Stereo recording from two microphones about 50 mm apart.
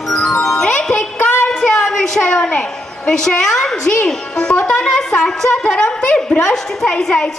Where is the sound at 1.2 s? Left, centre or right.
Left.